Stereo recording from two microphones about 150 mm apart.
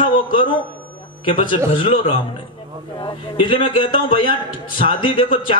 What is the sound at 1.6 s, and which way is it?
A man's voice, 40° left (ahead or behind).